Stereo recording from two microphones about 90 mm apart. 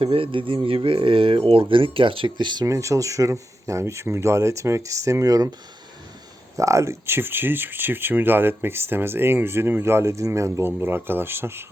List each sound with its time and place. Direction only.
0.0 s speech: 90° right; by 2.6 s 55° right (ahead or behind)
2.6 s speech: 35° right (ahead or behind)
6.6 s speech: 35° right (ahead or behind)
10.7 s speech: 20° right (ahead or behind)